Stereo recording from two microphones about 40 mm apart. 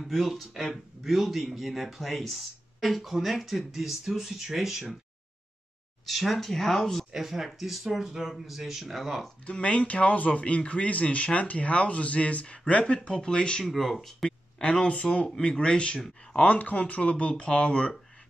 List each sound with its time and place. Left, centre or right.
0.0 s speech: centre
6.0 s speech: centre
7.2 s speech: centre
9.5 s speech: left
13.7 s speech: centre
14.6 s speech: left
16.4 s speech: left